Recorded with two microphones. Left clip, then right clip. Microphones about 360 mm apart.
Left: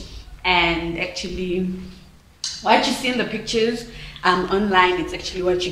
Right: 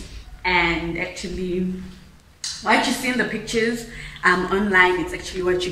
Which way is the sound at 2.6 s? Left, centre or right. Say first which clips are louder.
Left 2 dB; centre.